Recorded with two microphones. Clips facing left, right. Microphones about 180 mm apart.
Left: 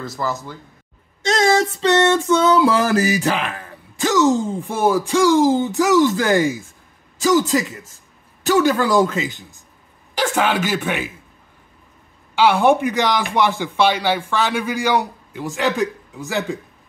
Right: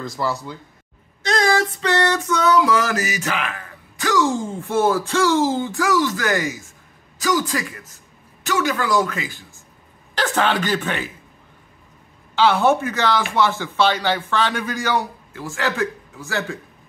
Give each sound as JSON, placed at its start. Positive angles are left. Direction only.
{"t": 1.2, "sound": "music", "side_deg": 25}
{"t": 8.5, "sound": "music", "side_deg": 35}
{"t": 10.1, "sound": "speech", "side_deg": 10}
{"t": 12.4, "sound": "speech", "side_deg": 10}